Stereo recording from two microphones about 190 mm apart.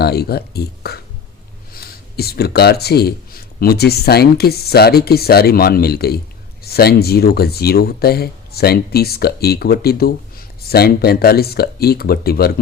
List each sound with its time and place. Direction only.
0.0 s speech: 55° left (ahead or behind)